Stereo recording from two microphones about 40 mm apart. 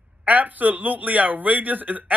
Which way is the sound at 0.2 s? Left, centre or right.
Right.